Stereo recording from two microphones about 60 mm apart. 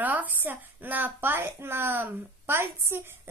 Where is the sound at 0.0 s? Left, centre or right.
Right.